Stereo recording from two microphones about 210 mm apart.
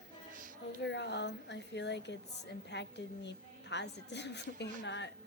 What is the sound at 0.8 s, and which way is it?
A woman's voice, 55° left (ahead or behind).